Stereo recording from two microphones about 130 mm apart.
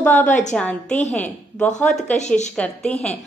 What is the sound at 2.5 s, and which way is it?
Speech, 10° left (ahead or behind).